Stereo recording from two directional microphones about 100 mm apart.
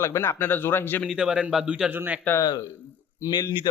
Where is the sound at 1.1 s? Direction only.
10° right (ahead or behind).